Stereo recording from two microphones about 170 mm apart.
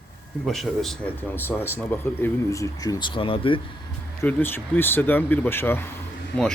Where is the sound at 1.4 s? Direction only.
10° left (ahead or behind); by 3.6 s 30° left (ahead or behind).